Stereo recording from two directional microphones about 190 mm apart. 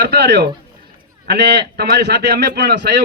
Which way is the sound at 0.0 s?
60° right (ahead or behind).